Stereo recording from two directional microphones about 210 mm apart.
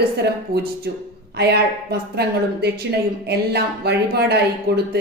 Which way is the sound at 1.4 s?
50° right (ahead or behind).